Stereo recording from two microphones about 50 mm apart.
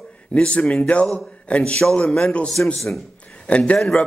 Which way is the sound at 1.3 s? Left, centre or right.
Left.